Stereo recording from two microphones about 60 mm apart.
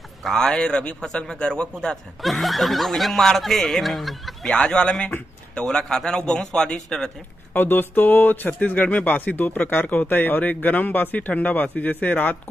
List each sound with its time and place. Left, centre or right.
0.2 s a man's voice: centre
1.0 s a man's voice: centre
2.2 s a man's voice: centre
7.5 s speech: left